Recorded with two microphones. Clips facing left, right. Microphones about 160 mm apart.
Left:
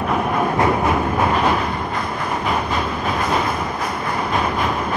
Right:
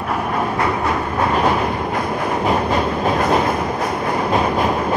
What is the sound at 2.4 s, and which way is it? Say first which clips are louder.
Train: right 5 dB; 40° right (ahead or behind).